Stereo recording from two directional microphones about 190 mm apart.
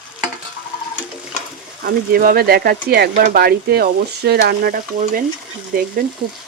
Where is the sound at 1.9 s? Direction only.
50° right (ahead or behind).